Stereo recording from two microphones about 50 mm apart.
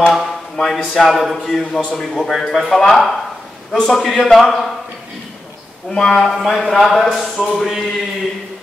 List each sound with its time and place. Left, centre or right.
0.0 s speech: centre
5.9 s speech: centre